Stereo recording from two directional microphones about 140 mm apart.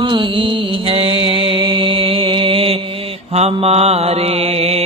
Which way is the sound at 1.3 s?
35° right (ahead or behind).